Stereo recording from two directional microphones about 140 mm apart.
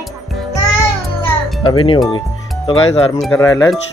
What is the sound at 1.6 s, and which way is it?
Speech, 35° left (ahead or behind).